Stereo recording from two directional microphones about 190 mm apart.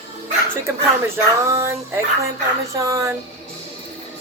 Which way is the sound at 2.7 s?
15° right (ahead or behind).